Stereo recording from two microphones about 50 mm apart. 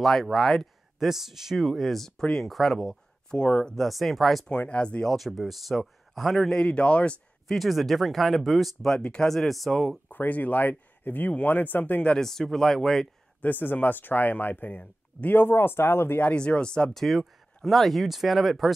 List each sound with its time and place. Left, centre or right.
0.0 s speech: centre
0.9 s speech: centre
3.7 s speech: centre
4.5 s speech: left
5.0 s speech: centre
6.5 s speech: left
7.4 s speech: centre
8.9 s speech: centre
9.3 s speech: centre
10.0 s speech: left
12.2 s speech: centre
13.4 s speech: left
16.3 s speech: left
16.9 s speech: centre